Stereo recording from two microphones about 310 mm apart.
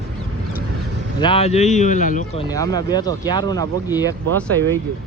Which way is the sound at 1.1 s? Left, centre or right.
Centre.